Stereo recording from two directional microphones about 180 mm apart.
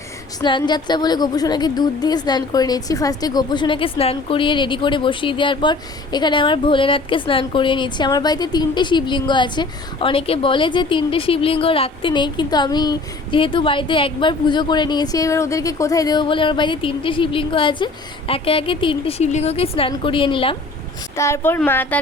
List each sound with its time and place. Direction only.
0.4 s a woman's voice: 25° left (ahead or behind)
21.2 s speech: 15° left (ahead or behind)